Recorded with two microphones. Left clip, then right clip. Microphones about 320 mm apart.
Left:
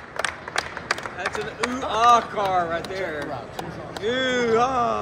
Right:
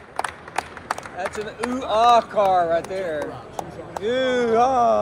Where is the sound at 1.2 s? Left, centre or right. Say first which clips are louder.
Left 1 dB; centre.